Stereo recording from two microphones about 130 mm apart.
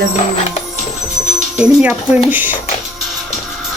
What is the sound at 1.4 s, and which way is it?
Speech, 5° right (ahead or behind).